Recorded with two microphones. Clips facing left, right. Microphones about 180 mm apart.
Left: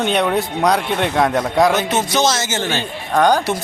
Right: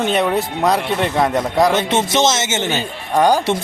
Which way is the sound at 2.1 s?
25° right (ahead or behind).